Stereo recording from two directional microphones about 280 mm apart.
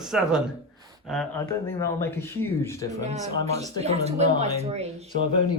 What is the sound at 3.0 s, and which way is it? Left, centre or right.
Speech, right.